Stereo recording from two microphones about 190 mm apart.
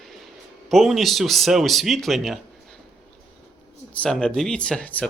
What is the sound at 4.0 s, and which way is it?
A man's voice, 5° left (ahead or behind).